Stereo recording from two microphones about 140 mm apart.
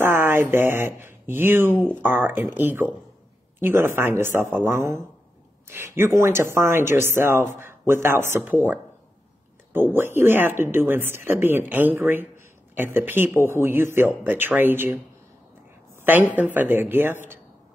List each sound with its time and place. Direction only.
0.0 s speech: 15° right (ahead or behind)
16.3 s speech: 15° right (ahead or behind)